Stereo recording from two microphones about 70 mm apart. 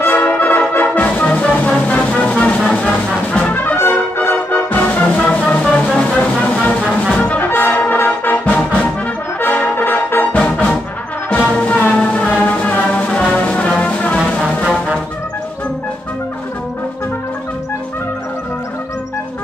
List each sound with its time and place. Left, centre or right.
0.0 s brass instrument: left
2.0 s music: centre
3.3 s brass instrument: centre
3.7 s brass instrument: left
5.2 s music: centre
7.2 s brass instrument: left
11.5 s music: left